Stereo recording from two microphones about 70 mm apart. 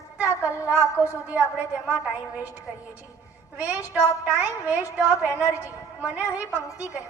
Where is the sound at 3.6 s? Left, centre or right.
Right.